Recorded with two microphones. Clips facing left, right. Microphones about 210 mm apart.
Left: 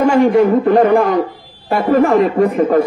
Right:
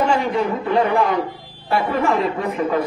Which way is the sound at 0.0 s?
45° left (ahead or behind).